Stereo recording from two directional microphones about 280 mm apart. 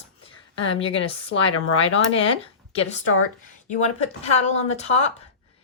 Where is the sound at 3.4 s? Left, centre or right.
Left.